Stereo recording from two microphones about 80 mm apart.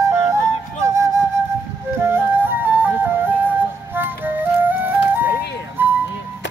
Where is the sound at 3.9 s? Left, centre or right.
Right.